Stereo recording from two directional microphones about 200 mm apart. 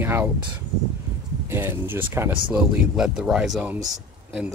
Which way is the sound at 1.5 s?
10° right (ahead or behind).